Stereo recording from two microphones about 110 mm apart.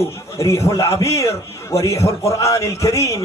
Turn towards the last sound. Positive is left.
turn(degrees=30)  # may be behind; listen again after turning